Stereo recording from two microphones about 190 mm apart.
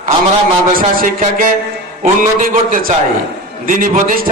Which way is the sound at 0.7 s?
50° right (ahead or behind).